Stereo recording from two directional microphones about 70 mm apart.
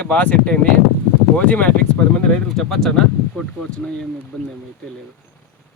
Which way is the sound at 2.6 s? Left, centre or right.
Centre.